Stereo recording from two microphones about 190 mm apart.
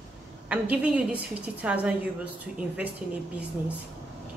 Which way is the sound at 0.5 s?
5° right (ahead or behind).